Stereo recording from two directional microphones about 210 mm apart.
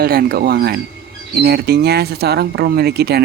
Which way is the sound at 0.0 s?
45° right (ahead or behind).